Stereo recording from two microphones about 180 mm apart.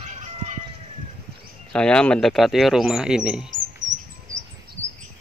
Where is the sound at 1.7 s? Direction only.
5° left (ahead or behind).